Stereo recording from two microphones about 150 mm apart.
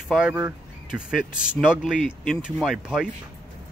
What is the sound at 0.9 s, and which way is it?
Speech, 5° right (ahead or behind).